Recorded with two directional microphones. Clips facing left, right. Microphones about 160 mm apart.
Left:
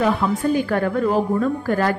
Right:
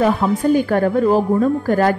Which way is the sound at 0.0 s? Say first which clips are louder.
Right 3 dB; 40° right (ahead or behind).